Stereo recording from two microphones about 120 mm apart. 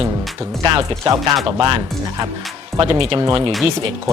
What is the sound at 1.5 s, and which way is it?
Speech, 45° right (ahead or behind).